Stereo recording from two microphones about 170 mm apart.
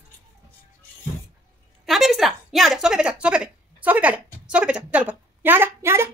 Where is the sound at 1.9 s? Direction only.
Centre (ahead or behind).